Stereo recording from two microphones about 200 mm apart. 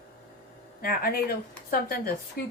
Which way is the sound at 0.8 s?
45° left (ahead or behind).